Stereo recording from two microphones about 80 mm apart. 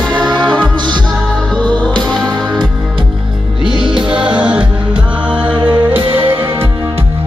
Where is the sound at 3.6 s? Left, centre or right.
Right.